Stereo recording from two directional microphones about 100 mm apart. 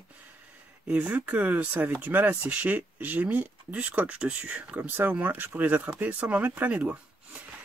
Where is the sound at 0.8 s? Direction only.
15° right (ahead or behind).